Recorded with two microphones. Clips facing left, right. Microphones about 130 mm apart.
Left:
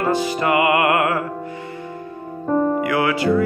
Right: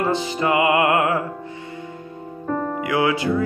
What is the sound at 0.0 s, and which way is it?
Music, 20° right (ahead or behind).